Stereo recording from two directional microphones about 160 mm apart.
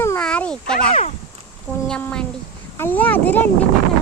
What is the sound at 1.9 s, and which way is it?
Speech, 5° left (ahead or behind).